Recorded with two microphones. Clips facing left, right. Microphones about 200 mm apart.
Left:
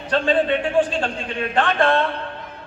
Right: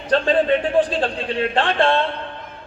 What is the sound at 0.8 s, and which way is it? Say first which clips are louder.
A man's voice: right 1 dB; 35° right (ahead or behind).